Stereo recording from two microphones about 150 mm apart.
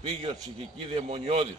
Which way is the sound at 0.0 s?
35° right (ahead or behind).